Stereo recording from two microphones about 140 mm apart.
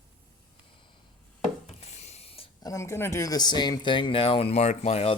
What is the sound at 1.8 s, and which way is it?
Ratchet, 50° left (ahead or behind).